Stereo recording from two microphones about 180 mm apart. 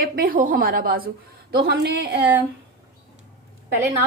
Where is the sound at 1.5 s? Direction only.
65° right (ahead or behind).